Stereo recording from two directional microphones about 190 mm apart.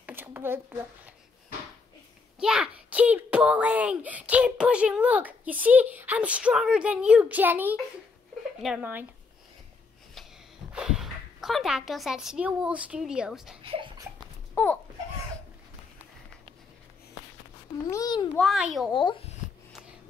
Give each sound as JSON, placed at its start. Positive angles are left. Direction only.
{"t": 0.0, "sound": "a sound", "side_deg": -10}
{"t": 2.3, "sound": "a child's voice", "side_deg": -5}
{"t": 10.7, "sound": "a woman's voice", "side_deg": -5}
{"t": 13.6, "sound": "speech", "side_deg": -25}
{"t": 14.5, "sound": "babbling", "side_deg": 10}
{"t": 17.8, "sound": "a child's voice", "side_deg": 20}
{"t": 18.3, "sound": "a child's voice", "side_deg": 0}
{"t": 18.9, "sound": "a child's voice", "side_deg": 25}